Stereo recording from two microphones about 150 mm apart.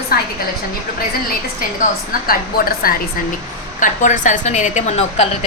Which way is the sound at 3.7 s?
60° left (ahead or behind).